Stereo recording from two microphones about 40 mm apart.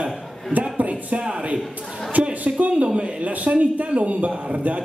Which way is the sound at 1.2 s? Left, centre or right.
Right.